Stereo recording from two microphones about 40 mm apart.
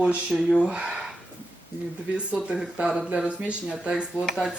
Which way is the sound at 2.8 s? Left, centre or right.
Centre.